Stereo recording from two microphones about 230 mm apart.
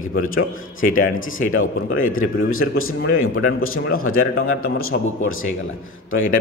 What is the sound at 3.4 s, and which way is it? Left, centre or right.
Speech, left.